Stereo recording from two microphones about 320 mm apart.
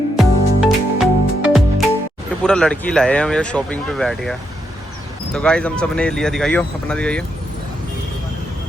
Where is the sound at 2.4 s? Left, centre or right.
Centre.